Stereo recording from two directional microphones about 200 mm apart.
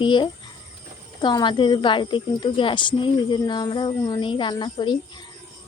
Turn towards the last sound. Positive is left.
turn(degrees=25)  # may be behind; listen again after turning